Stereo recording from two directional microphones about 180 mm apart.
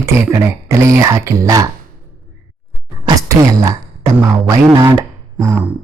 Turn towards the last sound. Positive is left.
turn(degrees=-15)  # may be behind; listen again after turning